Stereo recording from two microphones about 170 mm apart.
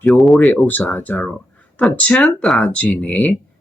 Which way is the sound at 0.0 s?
5° left (ahead or behind).